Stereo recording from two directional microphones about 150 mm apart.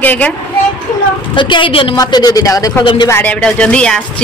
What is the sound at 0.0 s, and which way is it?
Speech, 10° left (ahead or behind).